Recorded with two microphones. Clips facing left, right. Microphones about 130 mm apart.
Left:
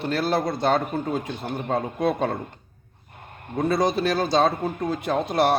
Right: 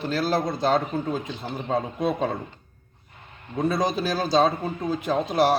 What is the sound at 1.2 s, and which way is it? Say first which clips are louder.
Speech: left 2 dB; 60° left (ahead or behind).